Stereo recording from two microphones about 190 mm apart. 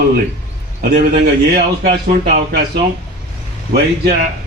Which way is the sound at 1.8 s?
35° right (ahead or behind).